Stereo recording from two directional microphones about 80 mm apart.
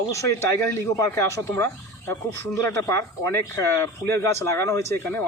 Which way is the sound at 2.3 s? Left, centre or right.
Left.